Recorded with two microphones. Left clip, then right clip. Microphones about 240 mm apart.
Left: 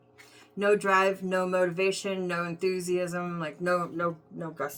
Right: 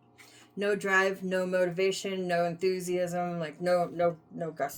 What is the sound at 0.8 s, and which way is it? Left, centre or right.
Speech, centre.